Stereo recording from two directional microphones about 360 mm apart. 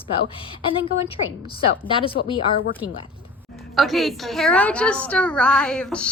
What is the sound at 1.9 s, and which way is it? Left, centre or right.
Speech, centre.